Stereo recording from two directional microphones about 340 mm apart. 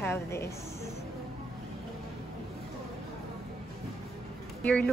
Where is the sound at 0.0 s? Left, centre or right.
Centre.